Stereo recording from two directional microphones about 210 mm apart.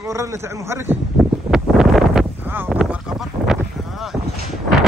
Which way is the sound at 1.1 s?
Centre (ahead or behind).